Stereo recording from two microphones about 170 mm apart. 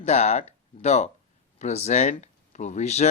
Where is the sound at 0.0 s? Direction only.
40° left (ahead or behind).